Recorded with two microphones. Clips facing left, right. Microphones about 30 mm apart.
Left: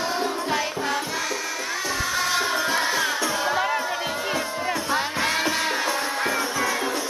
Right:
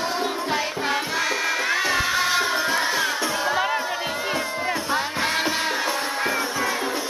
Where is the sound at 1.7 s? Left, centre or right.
Right.